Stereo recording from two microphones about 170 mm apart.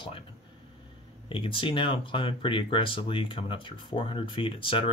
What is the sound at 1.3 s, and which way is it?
Speech, 30° left (ahead or behind).